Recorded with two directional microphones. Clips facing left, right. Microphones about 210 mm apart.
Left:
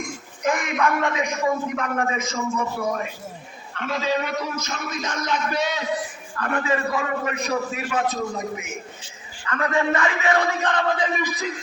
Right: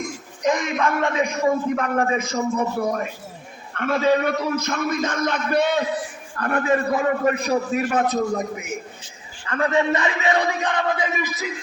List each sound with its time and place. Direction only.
0.4 s a man's voice: 20° right (ahead or behind); by 3.1 s 40° right (ahead or behind)
3.8 s a man's voice: 55° right (ahead or behind)
6.3 s a man's voice: 40° right (ahead or behind)
9.5 s speech: 30° right (ahead or behind); by 11.5 s 10° right (ahead or behind)